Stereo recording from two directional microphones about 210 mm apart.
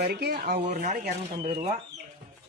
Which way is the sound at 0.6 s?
35° right (ahead or behind).